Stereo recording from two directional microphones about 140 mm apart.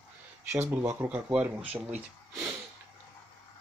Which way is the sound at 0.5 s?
20° right (ahead or behind).